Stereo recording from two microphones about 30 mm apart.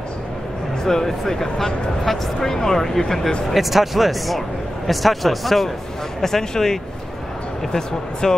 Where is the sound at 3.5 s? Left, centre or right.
Centre.